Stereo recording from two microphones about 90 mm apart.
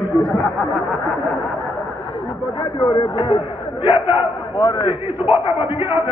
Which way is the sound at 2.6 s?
65° left (ahead or behind).